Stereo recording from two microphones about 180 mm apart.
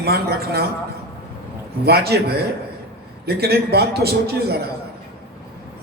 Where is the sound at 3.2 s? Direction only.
60° right (ahead or behind).